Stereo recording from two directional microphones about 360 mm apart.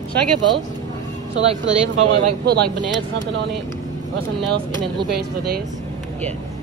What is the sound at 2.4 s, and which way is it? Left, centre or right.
Speech, right.